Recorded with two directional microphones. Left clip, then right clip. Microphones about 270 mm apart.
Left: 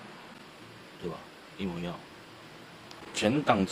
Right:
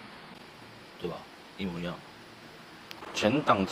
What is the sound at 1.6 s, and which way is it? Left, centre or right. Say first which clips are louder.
Speech: even; centre.